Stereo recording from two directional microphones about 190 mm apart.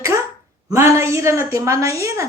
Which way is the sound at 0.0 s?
15° right (ahead or behind).